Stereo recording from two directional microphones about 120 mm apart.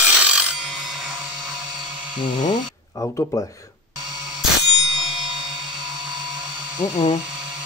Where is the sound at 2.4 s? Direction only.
30° left (ahead or behind).